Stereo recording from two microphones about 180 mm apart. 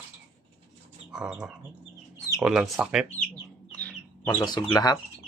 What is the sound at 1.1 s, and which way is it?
Speech, 5° right (ahead or behind).